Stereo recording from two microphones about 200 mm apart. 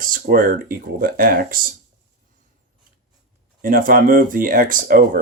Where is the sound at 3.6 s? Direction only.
45° right (ahead or behind).